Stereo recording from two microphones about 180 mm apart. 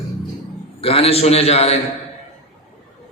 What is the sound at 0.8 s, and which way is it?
Speech, 30° left (ahead or behind).